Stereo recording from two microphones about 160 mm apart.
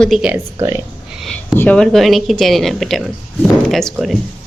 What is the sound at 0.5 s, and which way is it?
Speech, 15° right (ahead or behind).